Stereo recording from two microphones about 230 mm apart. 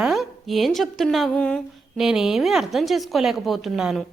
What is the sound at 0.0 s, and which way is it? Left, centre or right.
A woman's voice, centre.